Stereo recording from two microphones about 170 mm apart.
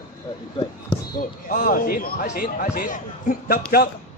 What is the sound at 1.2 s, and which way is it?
A man's voice, 55° left (ahead or behind).